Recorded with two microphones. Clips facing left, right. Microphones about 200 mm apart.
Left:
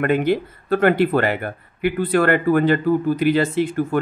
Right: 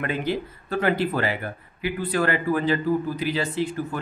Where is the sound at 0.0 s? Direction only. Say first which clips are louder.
Left 8 dB; 60° left (ahead or behind).